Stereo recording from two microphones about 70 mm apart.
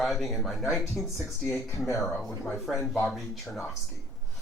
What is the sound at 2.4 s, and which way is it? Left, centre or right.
Speech, centre.